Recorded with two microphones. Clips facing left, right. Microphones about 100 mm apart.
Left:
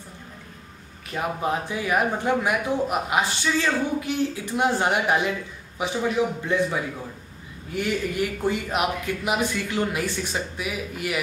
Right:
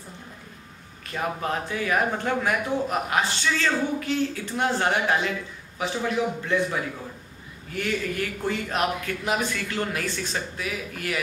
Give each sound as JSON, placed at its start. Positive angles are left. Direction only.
{"t": 1.1, "sound": "speech", "side_deg": 15}